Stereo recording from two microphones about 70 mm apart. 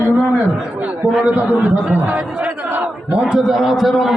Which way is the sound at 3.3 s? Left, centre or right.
Centre.